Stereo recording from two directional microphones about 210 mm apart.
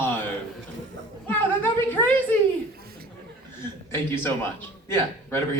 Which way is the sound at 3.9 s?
10° left (ahead or behind).